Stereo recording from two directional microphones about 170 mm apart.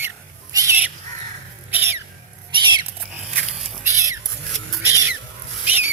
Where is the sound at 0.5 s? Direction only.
20° right (ahead or behind).